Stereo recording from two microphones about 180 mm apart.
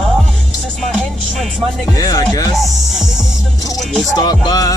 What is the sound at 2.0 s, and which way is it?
Music, 20° left (ahead or behind).